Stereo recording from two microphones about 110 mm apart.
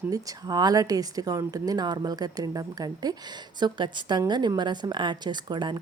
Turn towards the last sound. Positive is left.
turn(degrees=-45)  # may be behind; listen again after turning